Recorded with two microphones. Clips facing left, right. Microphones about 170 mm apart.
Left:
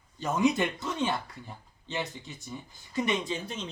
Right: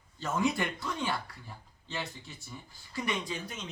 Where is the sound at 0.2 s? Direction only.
15° left (ahead or behind).